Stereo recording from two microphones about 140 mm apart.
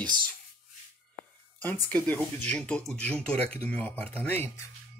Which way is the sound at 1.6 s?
15° left (ahead or behind).